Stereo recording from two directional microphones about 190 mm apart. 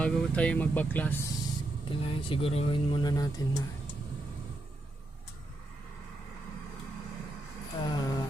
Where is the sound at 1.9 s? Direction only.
30° left (ahead or behind).